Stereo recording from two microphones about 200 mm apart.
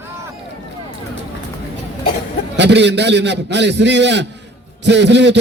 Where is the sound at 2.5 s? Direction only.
60° right (ahead or behind).